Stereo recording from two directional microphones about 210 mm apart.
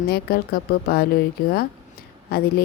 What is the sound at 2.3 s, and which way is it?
Speech, 45° left (ahead or behind).